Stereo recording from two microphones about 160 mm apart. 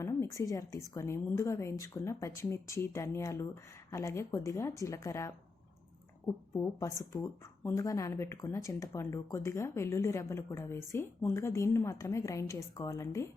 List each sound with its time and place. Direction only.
0.0 s speech: 20° left (ahead or behind)